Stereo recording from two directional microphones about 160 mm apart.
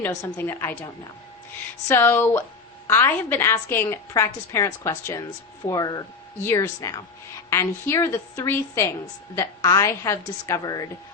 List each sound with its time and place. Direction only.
0.0 s a woman's voice: 20° left (ahead or behind)